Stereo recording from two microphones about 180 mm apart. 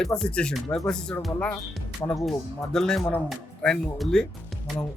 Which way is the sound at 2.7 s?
5° left (ahead or behind).